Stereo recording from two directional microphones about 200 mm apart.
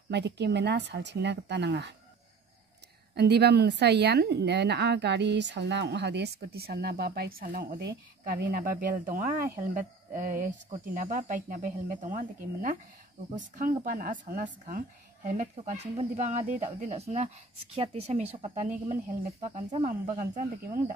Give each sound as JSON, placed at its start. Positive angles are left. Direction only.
{"t": 0.1, "sound": "speech", "side_deg": -60}
{"t": 3.2, "sound": "a woman's voice", "side_deg": -55}